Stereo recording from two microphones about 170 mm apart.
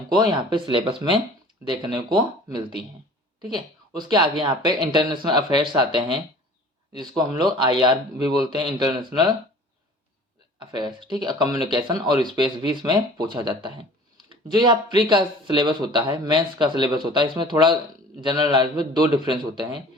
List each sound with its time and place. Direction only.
0.1 s speech: 25° right (ahead or behind)
7.0 s speech: 25° right (ahead or behind)
10.6 s speech: 25° right (ahead or behind)